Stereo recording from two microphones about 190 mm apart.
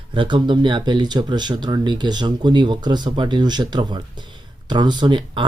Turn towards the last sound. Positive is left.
turn(degrees=-25)  # may be behind; listen again after turning